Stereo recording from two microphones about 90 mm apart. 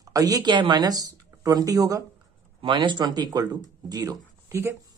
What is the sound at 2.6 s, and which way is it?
Speech, 65° right (ahead or behind).